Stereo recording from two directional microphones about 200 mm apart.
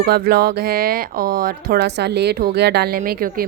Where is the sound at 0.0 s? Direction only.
50° right (ahead or behind).